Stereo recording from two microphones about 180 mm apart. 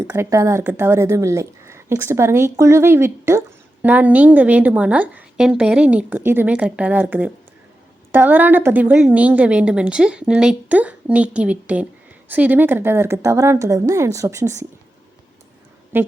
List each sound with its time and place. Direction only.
0.1 s a woman's voice: 15° right (ahead or behind)
15.9 s a woman's voice: 10° right (ahead or behind)